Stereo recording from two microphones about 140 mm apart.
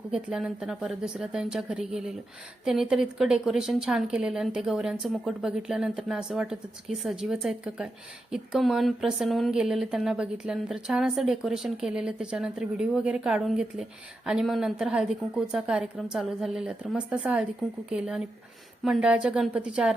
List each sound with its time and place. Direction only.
0.1 s speech: 5° right (ahead or behind)